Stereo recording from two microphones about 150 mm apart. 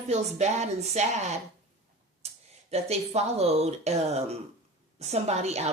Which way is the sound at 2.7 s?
45° right (ahead or behind).